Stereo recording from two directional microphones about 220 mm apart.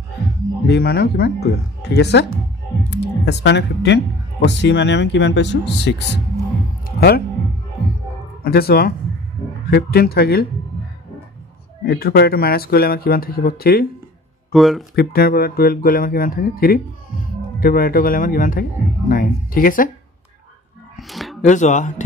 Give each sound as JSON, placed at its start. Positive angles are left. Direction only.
{"t": 0.7, "sound": "speech", "side_deg": 50}
{"t": 8.5, "sound": "speech", "side_deg": 45}
{"t": 11.8, "sound": "speech", "side_deg": 45}
{"t": 14.5, "sound": "speech", "side_deg": 0}
{"t": 15.0, "sound": "speech", "side_deg": 45}
{"t": 21.1, "sound": "a sound", "side_deg": 0}
{"t": 21.4, "sound": "speech", "side_deg": 35}